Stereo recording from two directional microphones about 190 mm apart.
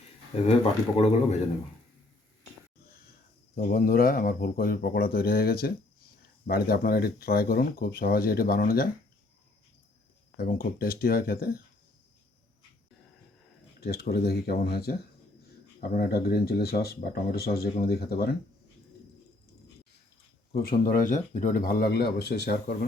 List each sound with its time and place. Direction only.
0.9 s speech: 30° left (ahead or behind)
3.5 s speech: 50° left (ahead or behind)
10.3 s speech: 50° left (ahead or behind)
13.8 s speech: 55° left (ahead or behind)
20.5 s speech: 50° left (ahead or behind)